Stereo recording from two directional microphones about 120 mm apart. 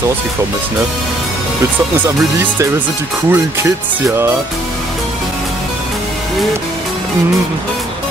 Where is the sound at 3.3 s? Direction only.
20° right (ahead or behind).